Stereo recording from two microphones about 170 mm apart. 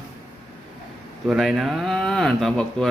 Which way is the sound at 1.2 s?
Centre (ahead or behind).